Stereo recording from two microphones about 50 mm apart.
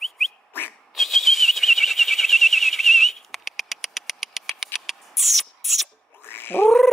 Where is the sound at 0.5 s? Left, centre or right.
Left.